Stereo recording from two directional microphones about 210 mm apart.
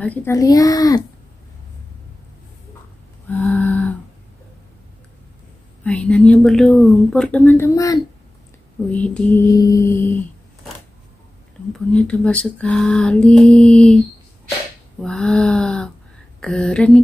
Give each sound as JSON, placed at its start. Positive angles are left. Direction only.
{"t": 0.0, "sound": "speech", "side_deg": 10}
{"t": 3.3, "sound": "music", "side_deg": 10}
{"t": 5.9, "sound": "speech", "side_deg": 5}
{"t": 11.7, "sound": "speech", "side_deg": 5}
{"t": 15.0, "sound": "a sound", "side_deg": 0}
{"t": 16.3, "sound": "speech", "side_deg": 5}